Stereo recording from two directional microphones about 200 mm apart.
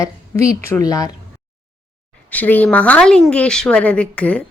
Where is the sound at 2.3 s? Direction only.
10° left (ahead or behind).